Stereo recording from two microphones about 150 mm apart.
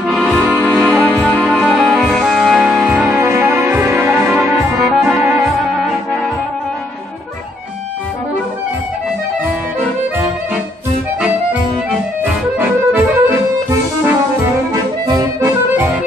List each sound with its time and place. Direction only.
0.0 s music: centre (ahead or behind); by 4.6 s 15° right (ahead or behind)
4.6 s music: centre (ahead or behind)
5.2 s music: 15° right (ahead or behind)
12.2 s accordion: 15° right (ahead or behind)
15.0 s accordion: 25° right (ahead or behind)